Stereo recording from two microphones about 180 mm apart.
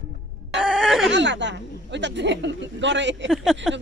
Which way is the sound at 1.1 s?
80° right.